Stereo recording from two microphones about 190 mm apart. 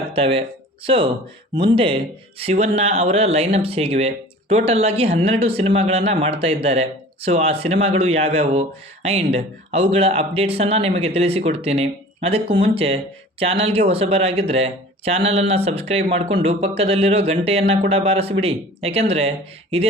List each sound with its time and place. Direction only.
0.1 s speech: 30° right (ahead or behind)